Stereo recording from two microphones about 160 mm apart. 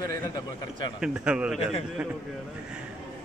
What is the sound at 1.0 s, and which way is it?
Speech, 5° right (ahead or behind).